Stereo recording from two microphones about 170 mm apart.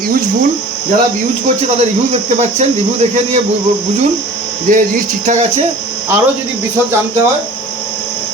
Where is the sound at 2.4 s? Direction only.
40° right (ahead or behind).